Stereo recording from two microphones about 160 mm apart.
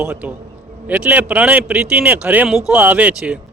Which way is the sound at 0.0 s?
5° right (ahead or behind).